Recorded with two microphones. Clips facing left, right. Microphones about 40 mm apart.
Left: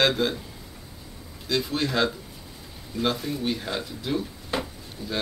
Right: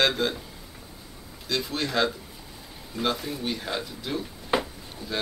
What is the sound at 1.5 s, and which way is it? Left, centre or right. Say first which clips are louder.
Speech: left 2 dB; centre.